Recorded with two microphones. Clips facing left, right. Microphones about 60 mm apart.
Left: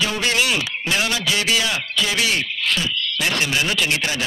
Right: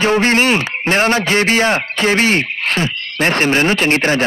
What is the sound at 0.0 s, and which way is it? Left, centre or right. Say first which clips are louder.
A man's voice: right 8 dB; right.